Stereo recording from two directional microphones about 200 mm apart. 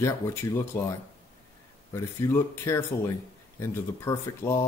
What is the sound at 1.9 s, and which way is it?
Speech, 15° left (ahead or behind).